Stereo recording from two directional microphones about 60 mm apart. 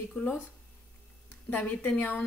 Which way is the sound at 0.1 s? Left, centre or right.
Centre.